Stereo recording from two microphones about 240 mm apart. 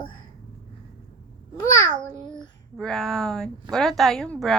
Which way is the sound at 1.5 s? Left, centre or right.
Centre.